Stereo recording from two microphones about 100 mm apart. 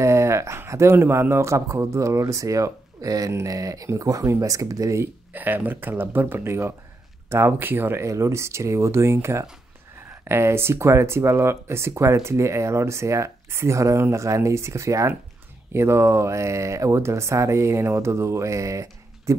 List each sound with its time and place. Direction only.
0.0 s speech: 30° right (ahead or behind)